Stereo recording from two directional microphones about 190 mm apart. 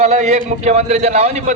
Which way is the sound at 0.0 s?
35° right (ahead or behind).